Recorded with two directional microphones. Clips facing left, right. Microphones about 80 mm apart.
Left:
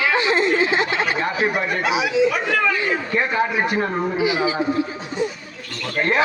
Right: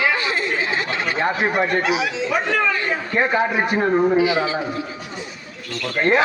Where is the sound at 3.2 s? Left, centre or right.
Right.